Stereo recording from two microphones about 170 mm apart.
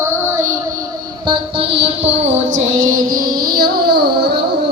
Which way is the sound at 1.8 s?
40° right (ahead or behind).